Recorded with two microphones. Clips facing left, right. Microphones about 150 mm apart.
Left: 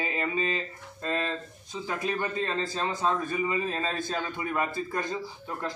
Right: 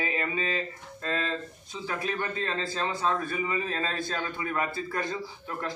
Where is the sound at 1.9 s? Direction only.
15° left (ahead or behind).